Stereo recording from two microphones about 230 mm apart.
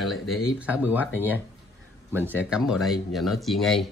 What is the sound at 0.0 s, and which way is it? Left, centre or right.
Speech, centre.